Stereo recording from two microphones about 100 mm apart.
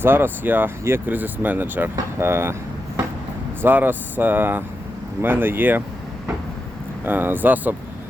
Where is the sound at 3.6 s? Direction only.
20° right (ahead or behind).